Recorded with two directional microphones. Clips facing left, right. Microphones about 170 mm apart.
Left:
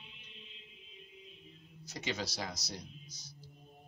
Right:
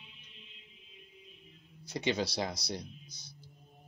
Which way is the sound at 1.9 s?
30° right (ahead or behind).